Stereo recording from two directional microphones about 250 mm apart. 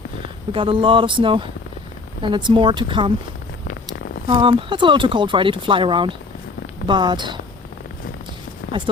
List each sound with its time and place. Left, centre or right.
0.5 s speech: right
4.3 s speech: centre
8.7 s speech: centre